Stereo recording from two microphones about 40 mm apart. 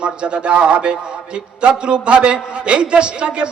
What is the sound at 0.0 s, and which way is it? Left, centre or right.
A man's voice, right.